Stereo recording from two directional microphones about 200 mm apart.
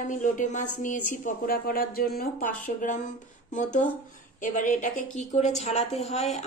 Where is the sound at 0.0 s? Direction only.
40° left (ahead or behind).